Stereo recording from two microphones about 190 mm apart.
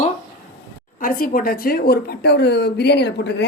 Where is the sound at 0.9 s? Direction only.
50° left (ahead or behind).